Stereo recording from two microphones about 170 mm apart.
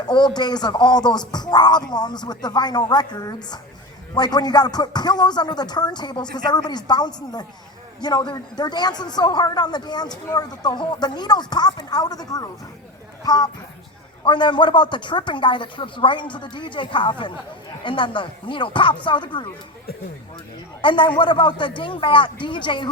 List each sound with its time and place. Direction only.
0.1 s speech: 25° left (ahead or behind)
20.8 s speech: 30° left (ahead or behind)